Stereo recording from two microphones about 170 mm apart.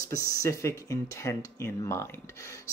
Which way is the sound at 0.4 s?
15° left (ahead or behind).